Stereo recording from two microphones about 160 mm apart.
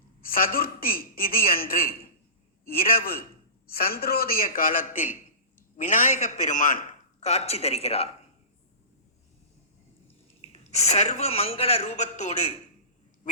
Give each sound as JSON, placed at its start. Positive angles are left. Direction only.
{"t": 0.2, "sound": "a man's voice", "side_deg": 65}
{"t": 10.5, "sound": "a man's voice", "side_deg": 45}